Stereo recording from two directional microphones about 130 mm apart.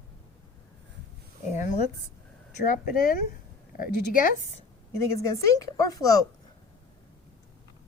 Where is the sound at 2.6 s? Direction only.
90° left.